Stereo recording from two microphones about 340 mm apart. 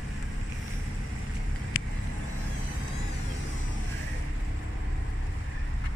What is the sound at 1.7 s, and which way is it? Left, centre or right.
Vehicle, left.